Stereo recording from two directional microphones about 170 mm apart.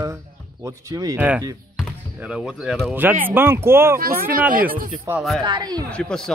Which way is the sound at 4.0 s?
60° right (ahead or behind).